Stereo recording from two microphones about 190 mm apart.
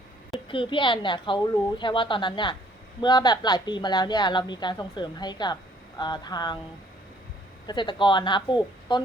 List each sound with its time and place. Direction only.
0.4 s a woman's voice: 25° left (ahead or behind)
7.7 s a woman's voice: 25° left (ahead or behind)